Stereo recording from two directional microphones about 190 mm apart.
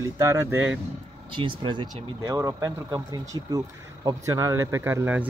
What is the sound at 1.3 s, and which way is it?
Speech, 25° right (ahead or behind).